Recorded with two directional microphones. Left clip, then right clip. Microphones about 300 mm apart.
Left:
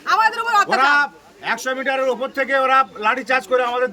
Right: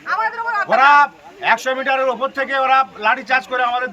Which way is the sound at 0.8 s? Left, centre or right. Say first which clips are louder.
Right 5 dB; centre.